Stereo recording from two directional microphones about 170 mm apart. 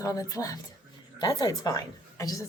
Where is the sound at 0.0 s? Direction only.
20° left (ahead or behind).